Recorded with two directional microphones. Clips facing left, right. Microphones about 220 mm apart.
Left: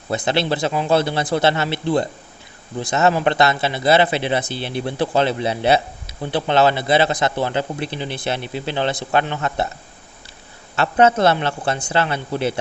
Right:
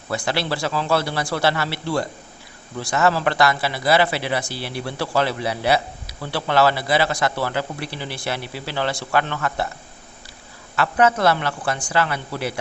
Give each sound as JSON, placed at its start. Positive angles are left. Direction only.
{"t": 0.1, "sound": "speech", "side_deg": 20}
{"t": 10.8, "sound": "speech", "side_deg": 25}